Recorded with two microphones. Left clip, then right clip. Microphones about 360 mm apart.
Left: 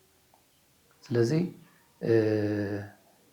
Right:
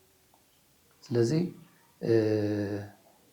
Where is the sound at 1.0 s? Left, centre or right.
Left.